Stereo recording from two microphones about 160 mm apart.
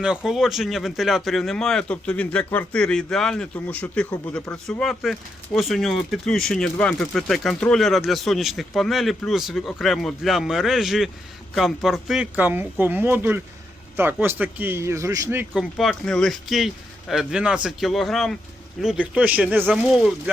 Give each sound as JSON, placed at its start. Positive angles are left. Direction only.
{"t": 0.3, "sound": "speech", "side_deg": 0}
{"t": 15.5, "sound": "speech", "side_deg": 0}